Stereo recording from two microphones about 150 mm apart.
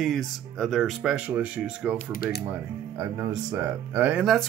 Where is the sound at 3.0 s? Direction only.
20° right (ahead or behind).